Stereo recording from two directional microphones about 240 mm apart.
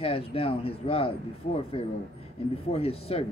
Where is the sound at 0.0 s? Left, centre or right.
Left.